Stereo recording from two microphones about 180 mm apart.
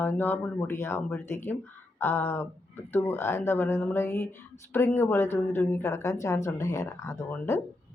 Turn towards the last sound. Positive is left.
turn(degrees=15)  # may be behind; listen again after turning